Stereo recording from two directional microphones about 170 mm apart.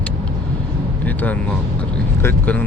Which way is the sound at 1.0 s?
10° left (ahead or behind).